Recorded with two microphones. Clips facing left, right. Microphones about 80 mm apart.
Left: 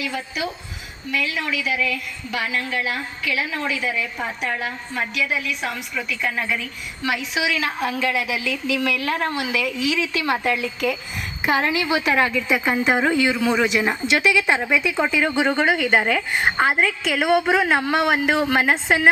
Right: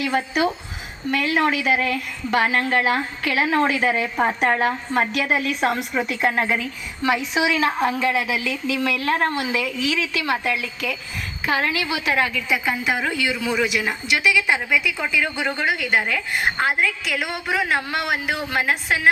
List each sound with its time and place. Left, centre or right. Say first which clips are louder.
0.0 s a woman's voice: right 6 dB; right
10.0 s a woman's voice: left 1 dB; left
11.4 s a woman's voice: left 2 dB; left